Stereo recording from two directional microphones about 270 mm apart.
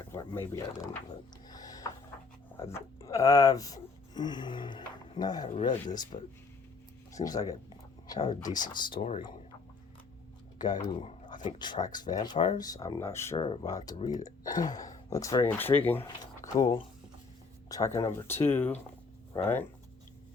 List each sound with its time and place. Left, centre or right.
0.1 s speech: centre
1.5 s a sound: centre
2.6 s speech: centre
7.1 s speech: centre
10.6 s speech: centre